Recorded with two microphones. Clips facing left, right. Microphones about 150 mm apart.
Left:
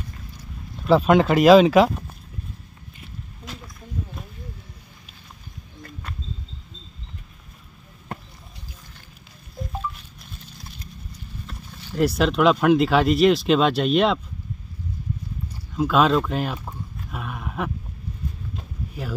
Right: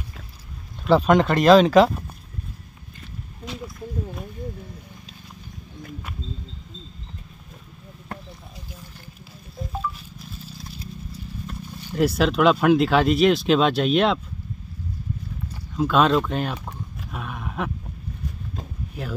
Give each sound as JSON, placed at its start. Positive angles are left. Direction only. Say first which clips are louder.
{"t": 0.8, "sound": "speech", "louder": "left 1 dB", "side_deg": 5}
{"t": 11.9, "sound": "speech", "louder": "even", "side_deg": 0}
{"t": 15.7, "sound": "speech", "louder": "even", "side_deg": 0}
{"t": 16.6, "sound": "roaring cats", "louder": "even", "side_deg": 0}